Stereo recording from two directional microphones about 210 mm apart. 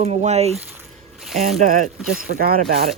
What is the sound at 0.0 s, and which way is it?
Speech, 30° right (ahead or behind).